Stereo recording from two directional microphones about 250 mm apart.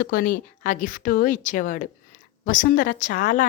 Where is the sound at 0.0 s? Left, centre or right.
Left.